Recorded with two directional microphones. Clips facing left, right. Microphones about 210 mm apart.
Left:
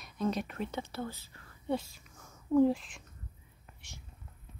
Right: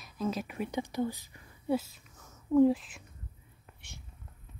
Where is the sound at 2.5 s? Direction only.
Centre (ahead or behind).